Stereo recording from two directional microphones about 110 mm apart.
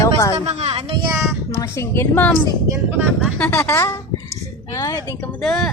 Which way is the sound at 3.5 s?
20° left (ahead or behind).